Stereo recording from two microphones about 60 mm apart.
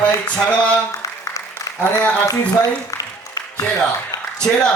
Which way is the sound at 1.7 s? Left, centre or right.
Left.